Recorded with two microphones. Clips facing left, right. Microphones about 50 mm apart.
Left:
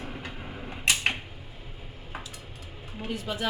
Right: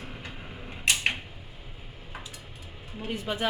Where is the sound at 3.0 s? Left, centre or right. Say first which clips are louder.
Right 1 dB; right.